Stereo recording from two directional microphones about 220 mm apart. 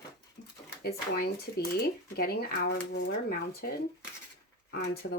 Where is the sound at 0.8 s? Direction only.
45° left (ahead or behind).